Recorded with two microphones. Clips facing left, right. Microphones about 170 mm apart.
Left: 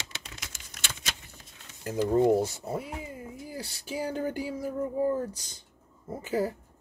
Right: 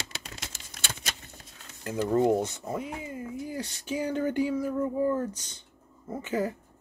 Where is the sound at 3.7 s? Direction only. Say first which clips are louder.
Right 2 dB; 35° left (ahead or behind).